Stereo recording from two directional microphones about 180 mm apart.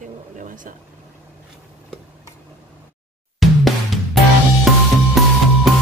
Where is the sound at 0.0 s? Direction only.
45° right (ahead or behind).